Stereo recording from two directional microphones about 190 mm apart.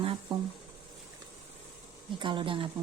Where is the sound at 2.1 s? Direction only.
25° right (ahead or behind).